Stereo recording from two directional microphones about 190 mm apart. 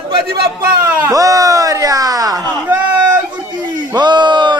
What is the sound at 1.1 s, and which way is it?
Speech, 20° right (ahead or behind).